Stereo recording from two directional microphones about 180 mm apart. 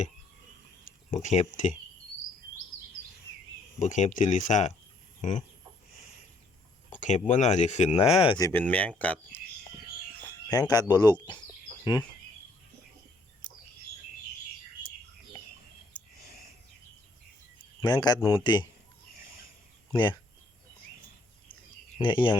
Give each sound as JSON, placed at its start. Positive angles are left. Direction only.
{"t": 1.1, "sound": "speech", "side_deg": 40}
{"t": 3.8, "sound": "speech", "side_deg": 40}
{"t": 6.9, "sound": "speech", "side_deg": 40}
{"t": 8.4, "sound": "speech", "side_deg": 15}
{"t": 10.5, "sound": "a man's voice", "side_deg": 20}
{"t": 17.7, "sound": "a man's voice", "side_deg": 20}
{"t": 19.9, "sound": "speech", "side_deg": 25}
{"t": 21.9, "sound": "speech", "side_deg": 25}